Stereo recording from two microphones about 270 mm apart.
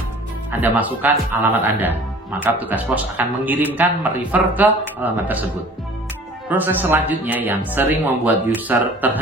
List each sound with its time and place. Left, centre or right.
0.5 s speech: centre
6.5 s speech: centre